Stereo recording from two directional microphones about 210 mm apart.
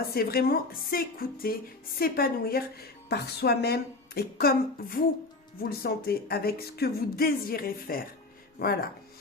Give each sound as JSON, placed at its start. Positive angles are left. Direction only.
{"t": 0.0, "sound": "speech", "side_deg": 45}